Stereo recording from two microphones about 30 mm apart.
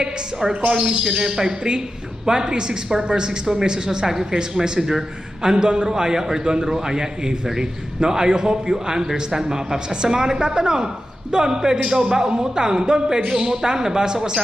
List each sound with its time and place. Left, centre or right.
0.7 s a man's voice: right
4.8 s a woman's voice: centre
5.4 s a man's voice: right